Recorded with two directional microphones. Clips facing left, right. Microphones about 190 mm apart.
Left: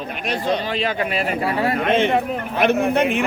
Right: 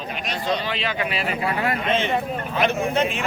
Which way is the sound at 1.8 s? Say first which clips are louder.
Left 5 dB; 55° left (ahead or behind).